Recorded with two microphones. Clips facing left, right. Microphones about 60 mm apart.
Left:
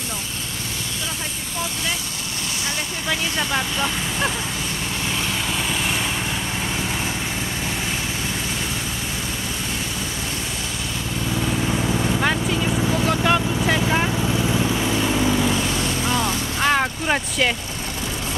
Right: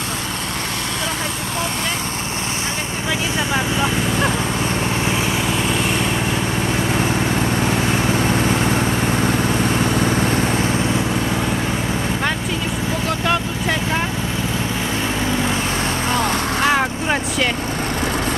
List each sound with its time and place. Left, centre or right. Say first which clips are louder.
3.3 s speech: right 3 dB; centre
8.2 s vehicle: right 9 dB; right
13.0 s vehicle: even; centre
15.5 s vehicle: right 2 dB; right
16.6 s vehicle: even; centre